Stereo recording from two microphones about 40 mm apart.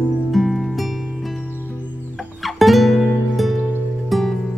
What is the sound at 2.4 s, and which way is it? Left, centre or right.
Music, centre.